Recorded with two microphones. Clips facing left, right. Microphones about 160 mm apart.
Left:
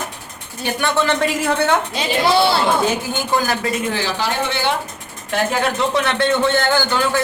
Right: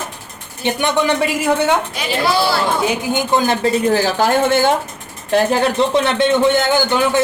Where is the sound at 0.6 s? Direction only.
20° right (ahead or behind).